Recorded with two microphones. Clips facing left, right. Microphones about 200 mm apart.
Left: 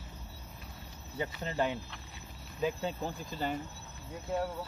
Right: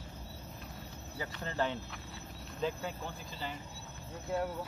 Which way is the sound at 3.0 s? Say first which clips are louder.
Left 6 dB; 50° left (ahead or behind).